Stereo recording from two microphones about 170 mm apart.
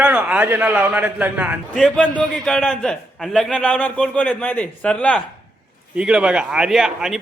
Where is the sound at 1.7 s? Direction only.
5° left (ahead or behind).